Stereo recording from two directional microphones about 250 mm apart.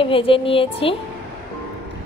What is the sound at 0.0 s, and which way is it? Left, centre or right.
Speech, left.